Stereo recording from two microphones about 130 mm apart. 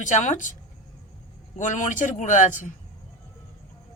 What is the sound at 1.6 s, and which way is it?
Speech, 80° left.